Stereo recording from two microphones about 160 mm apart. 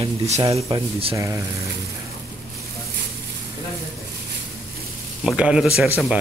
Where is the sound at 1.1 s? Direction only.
20° right (ahead or behind).